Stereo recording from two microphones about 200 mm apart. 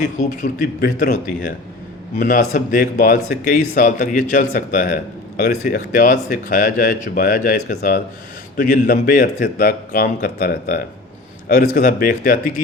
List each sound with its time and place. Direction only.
0.2 s speech: 40° left (ahead or behind)